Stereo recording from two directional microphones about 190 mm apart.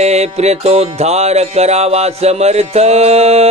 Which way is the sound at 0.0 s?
35° right (ahead or behind).